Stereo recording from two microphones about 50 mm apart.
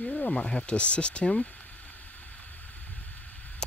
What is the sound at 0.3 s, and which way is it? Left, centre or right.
Speech, centre.